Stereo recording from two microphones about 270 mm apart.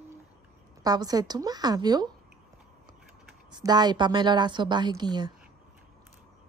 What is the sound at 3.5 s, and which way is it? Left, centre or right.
A woman's voice, centre.